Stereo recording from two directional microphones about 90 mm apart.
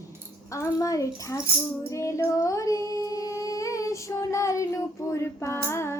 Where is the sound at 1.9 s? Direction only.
35° left (ahead or behind).